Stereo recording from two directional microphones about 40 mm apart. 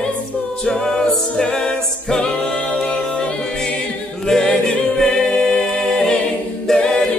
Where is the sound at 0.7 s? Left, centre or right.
Left.